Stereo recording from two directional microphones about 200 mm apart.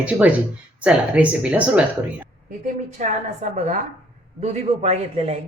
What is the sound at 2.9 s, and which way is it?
A man's voice, 35° right (ahead or behind).